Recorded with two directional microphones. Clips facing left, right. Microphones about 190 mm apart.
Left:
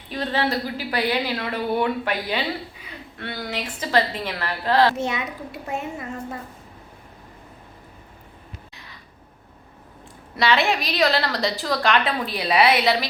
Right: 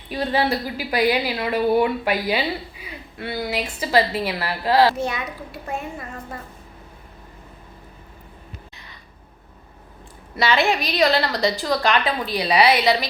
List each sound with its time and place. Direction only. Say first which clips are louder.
0.1 s a woman's voice: right 2 dB; 10° right (ahead or behind)
4.9 s a child's voice: even; 20° left (ahead or behind)
10.3 s a woman's voice: right 1 dB; centre (ahead or behind)